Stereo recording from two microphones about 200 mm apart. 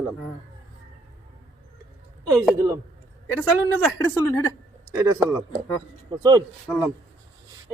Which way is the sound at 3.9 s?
15° left (ahead or behind).